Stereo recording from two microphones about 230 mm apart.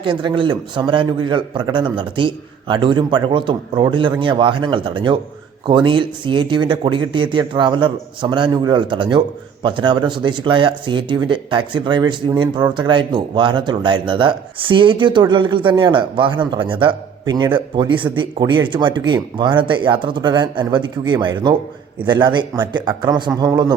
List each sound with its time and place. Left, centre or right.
0.0 s speech: right